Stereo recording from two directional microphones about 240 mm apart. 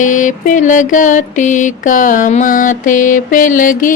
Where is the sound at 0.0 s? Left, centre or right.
Left.